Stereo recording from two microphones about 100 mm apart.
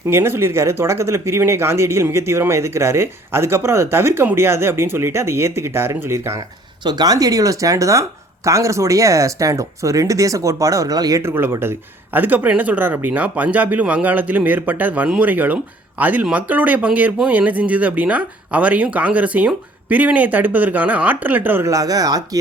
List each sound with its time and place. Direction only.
0.1 s speech: 25° right (ahead or behind)
6.8 s speech: 45° right (ahead or behind)
11.2 s speech: 25° right (ahead or behind)
21.7 s speech: 35° right (ahead or behind)